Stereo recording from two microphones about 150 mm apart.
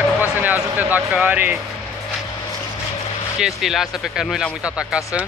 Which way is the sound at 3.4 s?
Centre (ahead or behind).